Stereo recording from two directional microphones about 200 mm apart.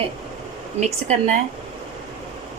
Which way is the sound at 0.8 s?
35° right (ahead or behind).